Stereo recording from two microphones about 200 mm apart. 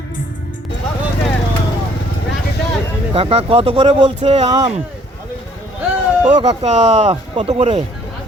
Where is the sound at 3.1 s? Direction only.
30° right (ahead or behind).